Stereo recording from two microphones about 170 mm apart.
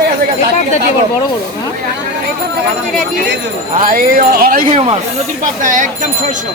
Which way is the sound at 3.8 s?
55° right (ahead or behind).